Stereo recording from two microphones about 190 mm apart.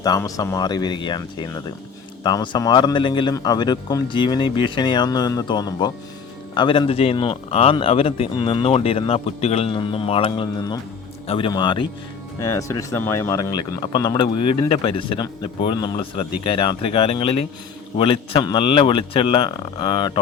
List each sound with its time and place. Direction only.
0.0 s speech: 20° left (ahead or behind)